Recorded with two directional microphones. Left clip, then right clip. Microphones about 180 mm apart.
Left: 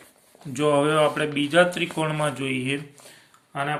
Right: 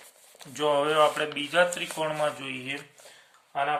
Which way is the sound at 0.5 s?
Centre (ahead or behind).